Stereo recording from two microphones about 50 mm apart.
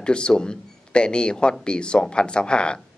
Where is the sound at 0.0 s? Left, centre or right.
Centre.